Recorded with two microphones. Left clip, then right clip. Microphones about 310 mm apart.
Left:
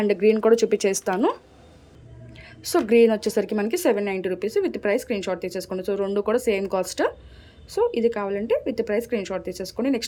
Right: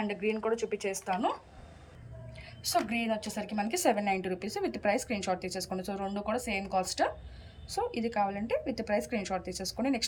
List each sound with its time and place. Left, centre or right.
0.1 s a woman's voice: centre
2.4 s a woman's voice: centre